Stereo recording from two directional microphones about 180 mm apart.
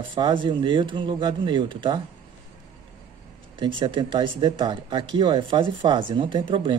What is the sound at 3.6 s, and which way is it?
Speech, 25° right (ahead or behind).